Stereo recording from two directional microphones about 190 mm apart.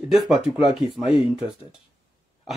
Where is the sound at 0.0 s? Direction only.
Centre (ahead or behind).